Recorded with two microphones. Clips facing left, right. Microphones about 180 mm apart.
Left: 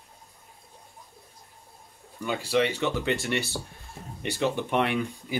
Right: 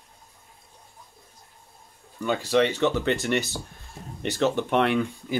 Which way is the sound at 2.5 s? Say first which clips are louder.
Right 3 dB; 10° left (ahead or behind).